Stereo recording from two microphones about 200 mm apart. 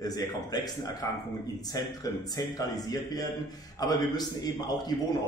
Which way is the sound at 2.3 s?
20° left (ahead or behind).